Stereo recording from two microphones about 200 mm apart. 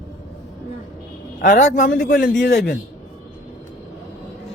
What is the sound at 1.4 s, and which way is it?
Speech, 40° left (ahead or behind).